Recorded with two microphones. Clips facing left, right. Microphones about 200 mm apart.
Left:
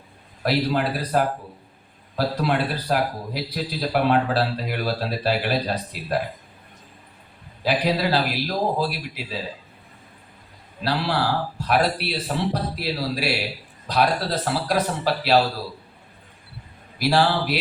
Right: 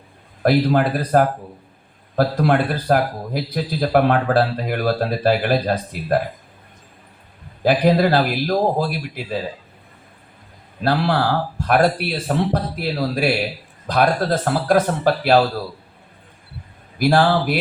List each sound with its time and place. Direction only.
0.4 s a man's voice: 50° right (ahead or behind)
7.6 s a man's voice: 50° right (ahead or behind)
10.8 s a man's voice: 50° right (ahead or behind)
17.0 s a man's voice: 50° right (ahead or behind)